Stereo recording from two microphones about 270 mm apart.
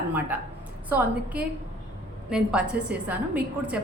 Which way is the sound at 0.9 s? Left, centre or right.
Centre.